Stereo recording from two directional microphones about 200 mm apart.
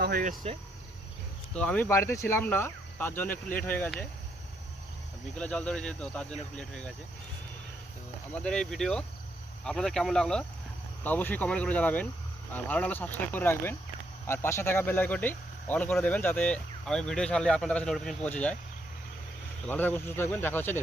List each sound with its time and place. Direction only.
0.0 s speech: 45° right (ahead or behind)
1.5 s speech: 5° left (ahead or behind)
5.4 s speech: 5° left (ahead or behind)
8.3 s speech: 5° left (ahead or behind)
19.6 s speech: 10° left (ahead or behind)